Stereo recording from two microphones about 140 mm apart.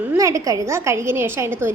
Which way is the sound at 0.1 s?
20° right (ahead or behind).